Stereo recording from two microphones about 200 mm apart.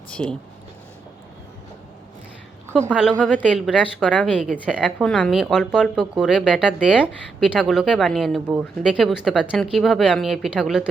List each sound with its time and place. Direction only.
0.1 s speech: 5° left (ahead or behind)
2.9 s speech: 5° right (ahead or behind)
3.2 s a woman's voice: 5° left (ahead or behind)
3.4 s speech: 5° right (ahead or behind)